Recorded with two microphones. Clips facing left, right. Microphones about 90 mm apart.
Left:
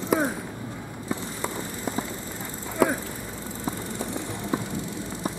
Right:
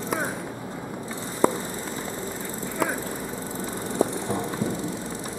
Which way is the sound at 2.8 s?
Centre (ahead or behind).